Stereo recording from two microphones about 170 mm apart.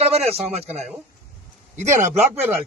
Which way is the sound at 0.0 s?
35° right (ahead or behind).